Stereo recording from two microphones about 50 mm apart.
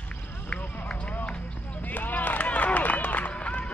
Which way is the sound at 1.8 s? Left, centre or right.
Left.